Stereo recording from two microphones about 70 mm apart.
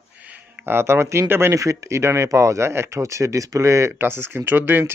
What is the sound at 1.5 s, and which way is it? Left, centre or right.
Speech, right.